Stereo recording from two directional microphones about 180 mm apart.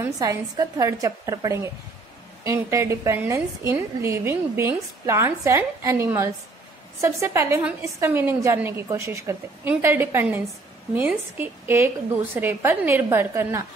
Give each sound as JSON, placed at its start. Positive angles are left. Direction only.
{"t": 0.0, "sound": "a woman's voice", "side_deg": -20}